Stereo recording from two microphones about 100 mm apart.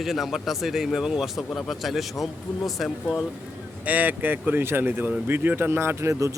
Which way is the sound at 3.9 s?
15° right (ahead or behind).